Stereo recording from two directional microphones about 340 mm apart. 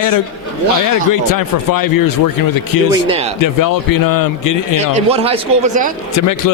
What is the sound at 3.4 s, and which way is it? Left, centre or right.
Speech, left.